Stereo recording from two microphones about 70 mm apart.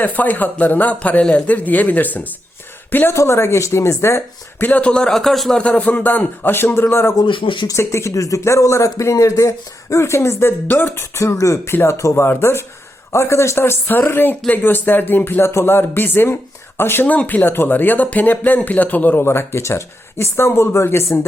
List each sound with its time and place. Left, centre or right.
0.0 s speech: left
3.1 s speech: left
4.6 s a man's voice: left
5.1 s a man's voice: centre
5.5 s a man's voice: centre
19.2 s speech: left